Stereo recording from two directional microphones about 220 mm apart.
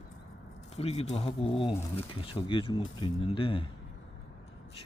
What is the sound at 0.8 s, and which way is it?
Speech, 30° left (ahead or behind).